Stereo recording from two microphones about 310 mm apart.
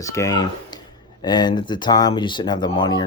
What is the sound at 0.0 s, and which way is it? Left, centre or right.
Speech, centre.